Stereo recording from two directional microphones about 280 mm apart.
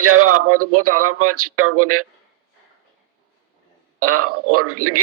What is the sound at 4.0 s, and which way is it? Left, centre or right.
A man's voice, right.